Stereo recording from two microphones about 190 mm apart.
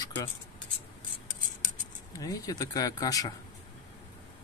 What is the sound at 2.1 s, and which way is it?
Speech, 20° left (ahead or behind).